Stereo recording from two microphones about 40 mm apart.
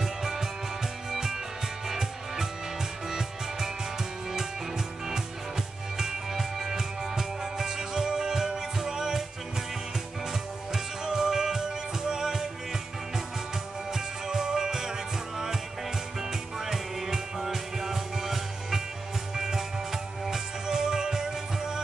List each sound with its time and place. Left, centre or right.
0.0 s music: centre
1.9 s music: centre
10.7 s music: centre
13.9 s music: centre